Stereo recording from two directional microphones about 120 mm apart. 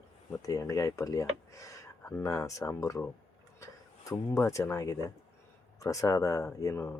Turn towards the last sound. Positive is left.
turn(degrees=25)  # may be behind; listen again after turning